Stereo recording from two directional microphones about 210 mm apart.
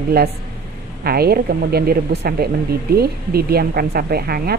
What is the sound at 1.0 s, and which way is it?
A woman's voice, 45° right (ahead or behind).